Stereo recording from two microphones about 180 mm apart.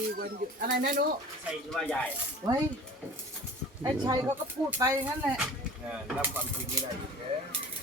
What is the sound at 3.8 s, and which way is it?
Speech, 20° right (ahead or behind).